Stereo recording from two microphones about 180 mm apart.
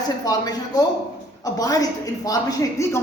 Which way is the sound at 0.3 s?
20° left (ahead or behind).